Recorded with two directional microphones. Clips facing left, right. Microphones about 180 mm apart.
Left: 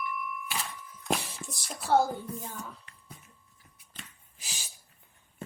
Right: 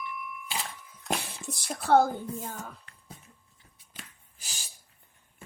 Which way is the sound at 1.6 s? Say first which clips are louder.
Right 3 dB; 55° right (ahead or behind).